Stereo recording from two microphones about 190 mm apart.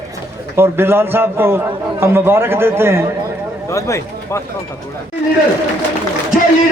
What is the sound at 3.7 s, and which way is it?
Speech, 15° left (ahead or behind).